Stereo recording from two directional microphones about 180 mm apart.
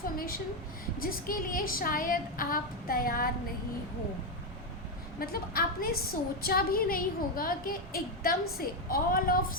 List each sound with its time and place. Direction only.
1.0 s a woman's voice: 55° left (ahead or behind)
5.2 s a woman's voice: 55° left (ahead or behind)